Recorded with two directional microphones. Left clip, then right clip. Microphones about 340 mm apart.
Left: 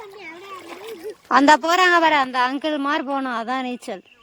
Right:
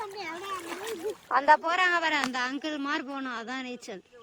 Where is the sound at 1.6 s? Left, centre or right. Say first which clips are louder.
Left 10 dB; centre.